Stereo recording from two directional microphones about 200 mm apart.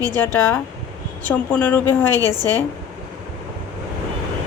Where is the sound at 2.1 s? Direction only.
20° right (ahead or behind).